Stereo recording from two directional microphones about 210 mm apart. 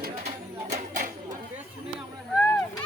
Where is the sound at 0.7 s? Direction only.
40° right (ahead or behind).